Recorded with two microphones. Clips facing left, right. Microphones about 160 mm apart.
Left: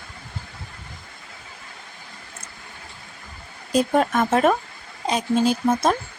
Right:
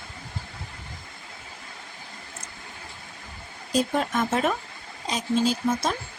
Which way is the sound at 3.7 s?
55° left (ahead or behind).